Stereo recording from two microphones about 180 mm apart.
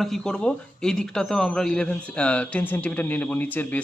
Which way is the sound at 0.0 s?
5° left (ahead or behind).